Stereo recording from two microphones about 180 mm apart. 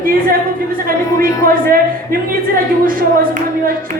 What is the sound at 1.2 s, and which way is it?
Speech, 50° right (ahead or behind).